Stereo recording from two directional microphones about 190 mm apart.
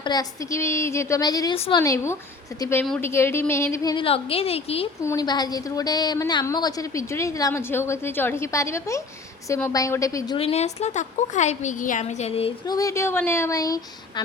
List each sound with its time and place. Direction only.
0.0 s a woman's voice: 20° left (ahead or behind)
1.5 s a woman's voice: 30° left (ahead or behind)
1.8 s a woman's voice: 15° left (ahead or behind)
3.9 s a woman's voice: 30° left (ahead or behind)
5.0 s a woman's voice: 20° left (ahead or behind)
10.3 s a woman's voice: 35° left (ahead or behind)
12.7 s a woman's voice: 15° left (ahead or behind)